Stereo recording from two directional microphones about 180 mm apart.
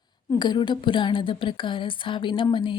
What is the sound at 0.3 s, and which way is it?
A woman's voice, 25° left (ahead or behind).